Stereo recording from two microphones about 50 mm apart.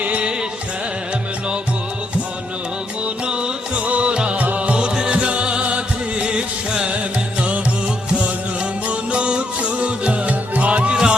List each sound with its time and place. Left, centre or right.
0.0 s music: right
3.2 s music: centre
8.9 s music: right